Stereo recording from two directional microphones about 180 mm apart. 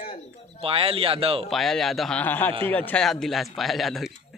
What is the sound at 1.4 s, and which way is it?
Speech, centre (ahead or behind).